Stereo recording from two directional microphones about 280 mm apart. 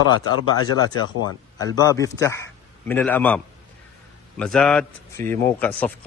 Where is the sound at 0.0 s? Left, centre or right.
Right.